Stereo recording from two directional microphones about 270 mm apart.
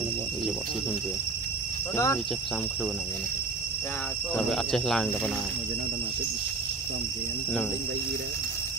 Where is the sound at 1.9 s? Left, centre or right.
Centre.